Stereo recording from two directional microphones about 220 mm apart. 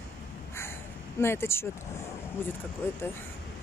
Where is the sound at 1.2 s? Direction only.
10° left (ahead or behind).